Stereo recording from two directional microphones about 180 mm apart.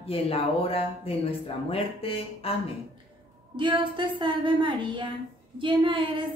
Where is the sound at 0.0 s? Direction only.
30° left (ahead or behind).